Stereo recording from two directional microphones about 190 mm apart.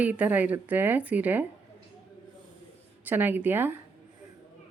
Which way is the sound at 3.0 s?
10° right (ahead or behind).